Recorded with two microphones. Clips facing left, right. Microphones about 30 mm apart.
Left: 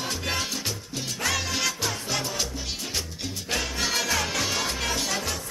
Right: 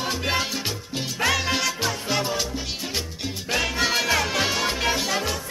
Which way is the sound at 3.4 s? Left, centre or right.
Centre.